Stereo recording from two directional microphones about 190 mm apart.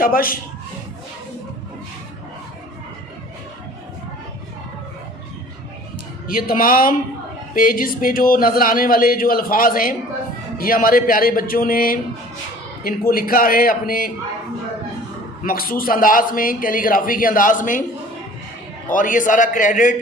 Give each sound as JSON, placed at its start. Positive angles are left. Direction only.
{"t": 0.0, "sound": "a man's voice", "side_deg": 50}
{"t": 6.2, "sound": "a man's voice", "side_deg": 50}
{"t": 15.4, "sound": "a man's voice", "side_deg": 50}
{"t": 18.9, "sound": "a man's voice", "side_deg": 45}